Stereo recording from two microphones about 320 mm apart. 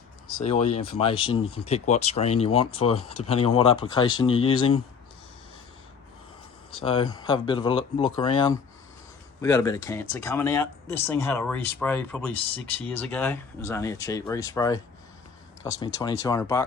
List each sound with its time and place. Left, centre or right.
0.3 s speech: centre
6.8 s speech: centre
16.0 s speech: centre